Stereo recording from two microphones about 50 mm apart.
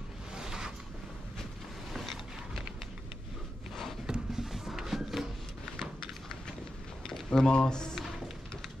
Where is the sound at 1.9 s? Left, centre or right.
Centre.